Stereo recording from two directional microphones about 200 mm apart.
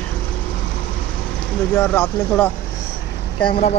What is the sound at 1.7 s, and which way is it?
Speech, 10° left (ahead or behind).